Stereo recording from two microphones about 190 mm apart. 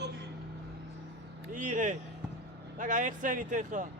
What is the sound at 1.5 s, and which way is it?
Speech, 45° right (ahead or behind).